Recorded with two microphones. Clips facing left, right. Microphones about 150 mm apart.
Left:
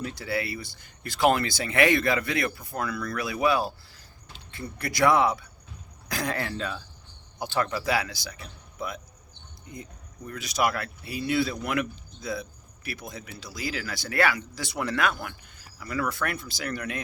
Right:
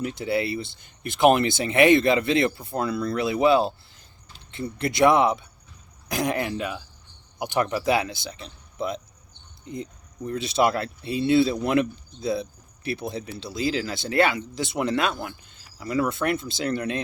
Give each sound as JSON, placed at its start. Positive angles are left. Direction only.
{"t": 0.0, "sound": "speech", "side_deg": -20}
{"t": 10.2, "sound": "speech", "side_deg": -25}